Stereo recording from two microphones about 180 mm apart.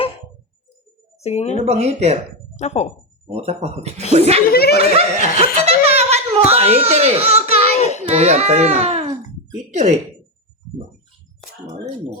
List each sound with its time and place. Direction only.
1.2 s speech: 35° left (ahead or behind)
1.6 s speech: 35° right (ahead or behind)
2.6 s speech: 35° left (ahead or behind)
3.2 s speech: 35° right (ahead or behind)
4.5 s speech: 60° left (ahead or behind)
4.8 s speech: 35° right (ahead or behind)
7.8 s child singing: 40° left (ahead or behind)
8.1 s a child's voice: 40° right (ahead or behind)